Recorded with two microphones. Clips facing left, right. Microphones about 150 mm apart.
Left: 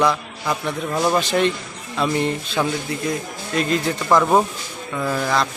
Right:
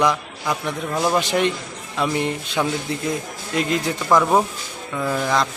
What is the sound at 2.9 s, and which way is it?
Speech, 25° right (ahead or behind).